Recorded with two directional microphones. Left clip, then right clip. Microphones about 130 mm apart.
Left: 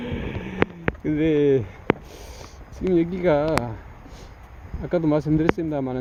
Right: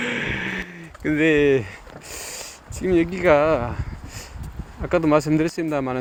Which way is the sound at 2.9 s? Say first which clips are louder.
Right 4 dB; 35° left (ahead or behind).